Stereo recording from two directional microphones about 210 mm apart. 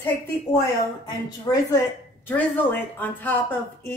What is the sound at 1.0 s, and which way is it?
Speech, 15° left (ahead or behind).